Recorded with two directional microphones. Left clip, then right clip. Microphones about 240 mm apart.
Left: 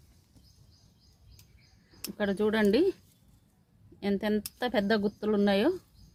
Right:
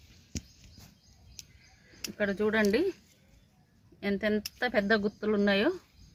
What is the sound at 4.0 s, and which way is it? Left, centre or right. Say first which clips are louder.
Speech: even; left.